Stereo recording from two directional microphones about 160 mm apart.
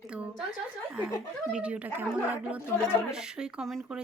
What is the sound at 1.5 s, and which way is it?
Speech, 5° right (ahead or behind).